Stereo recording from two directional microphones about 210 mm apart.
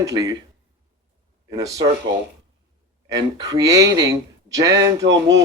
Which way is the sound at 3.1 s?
15° right (ahead or behind).